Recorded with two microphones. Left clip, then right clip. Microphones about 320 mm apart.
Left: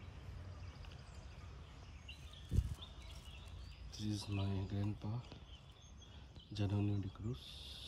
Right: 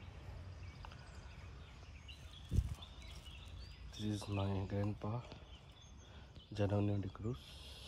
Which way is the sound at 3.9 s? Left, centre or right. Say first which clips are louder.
Right 1 dB; centre.